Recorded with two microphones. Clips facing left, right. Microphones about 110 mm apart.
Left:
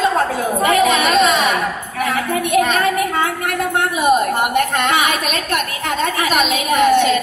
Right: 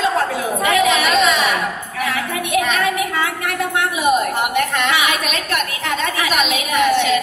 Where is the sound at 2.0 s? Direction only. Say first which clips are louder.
Left 4 dB; 45° left (ahead or behind).